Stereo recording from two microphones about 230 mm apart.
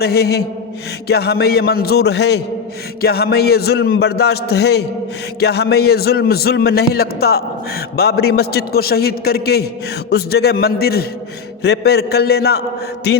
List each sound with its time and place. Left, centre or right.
0.0 s a man's voice: left